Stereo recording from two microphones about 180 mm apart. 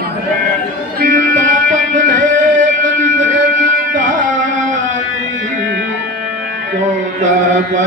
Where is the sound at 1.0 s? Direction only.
45° right (ahead or behind).